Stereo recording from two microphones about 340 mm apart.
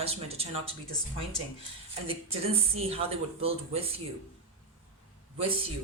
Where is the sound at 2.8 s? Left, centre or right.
Centre.